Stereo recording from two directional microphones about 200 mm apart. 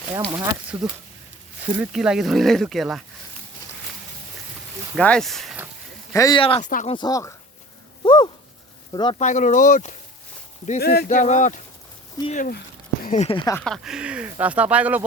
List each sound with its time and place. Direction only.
0.3 s speech: 15° right (ahead or behind)
0.7 s speech: 5° right (ahead or behind)
4.9 s speech: 5° left (ahead or behind)
6.1 s speech: 15° left (ahead or behind)
6.4 s speech: 25° left (ahead or behind)
6.7 s speech: 40° left (ahead or behind)
6.9 s speech: 20° left (ahead or behind)
8.0 s a sound: 25° left (ahead or behind)
8.9 s speech: 20° left (ahead or behind)
9.1 s speech: 35° left (ahead or behind)
10.8 s speech: 50° left (ahead or behind)
13.3 s speech: 20° left (ahead or behind)
13.6 s speech: centre (ahead or behind)